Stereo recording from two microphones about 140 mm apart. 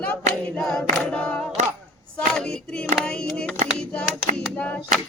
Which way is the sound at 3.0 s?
5° left (ahead or behind).